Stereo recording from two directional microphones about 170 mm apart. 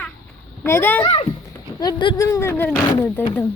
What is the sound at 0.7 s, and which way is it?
Speech, 15° left (ahead or behind).